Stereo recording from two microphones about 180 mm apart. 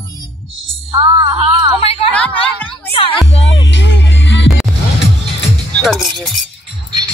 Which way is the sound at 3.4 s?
90° left.